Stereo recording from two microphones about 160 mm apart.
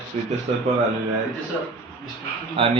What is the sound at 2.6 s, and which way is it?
Speech, 35° right (ahead or behind).